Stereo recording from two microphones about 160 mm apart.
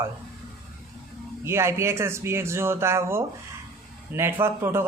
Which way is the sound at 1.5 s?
15° right (ahead or behind).